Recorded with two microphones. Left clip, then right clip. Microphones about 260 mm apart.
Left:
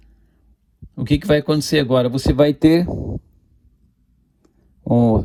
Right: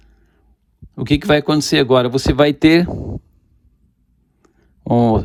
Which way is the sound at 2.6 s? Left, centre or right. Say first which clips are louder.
Right 2 dB; left.